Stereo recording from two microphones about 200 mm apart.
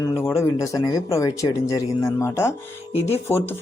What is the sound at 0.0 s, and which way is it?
Speech, 15° left (ahead or behind).